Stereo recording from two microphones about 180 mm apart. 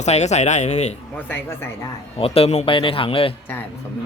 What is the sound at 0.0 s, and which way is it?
Speech, 40° left (ahead or behind).